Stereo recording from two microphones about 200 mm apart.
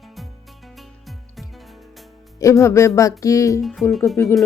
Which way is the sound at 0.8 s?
Centre (ahead or behind).